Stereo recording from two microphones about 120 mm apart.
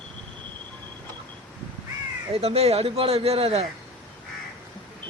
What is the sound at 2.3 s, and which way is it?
Speech, 60° right (ahead or behind).